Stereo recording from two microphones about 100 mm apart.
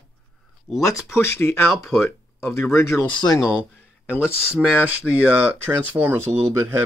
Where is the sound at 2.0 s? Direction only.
25° left (ahead or behind).